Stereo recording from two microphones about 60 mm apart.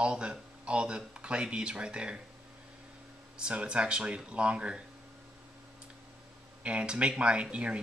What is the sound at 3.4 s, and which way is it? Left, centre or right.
Speech, centre.